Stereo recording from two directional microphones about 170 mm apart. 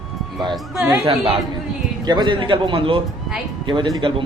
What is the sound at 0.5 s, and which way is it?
Speech, 5° right (ahead or behind).